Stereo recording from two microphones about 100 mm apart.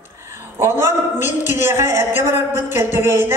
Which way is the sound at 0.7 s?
25° right (ahead or behind).